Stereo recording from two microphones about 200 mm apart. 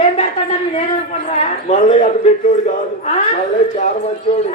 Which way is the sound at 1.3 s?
35° left (ahead or behind).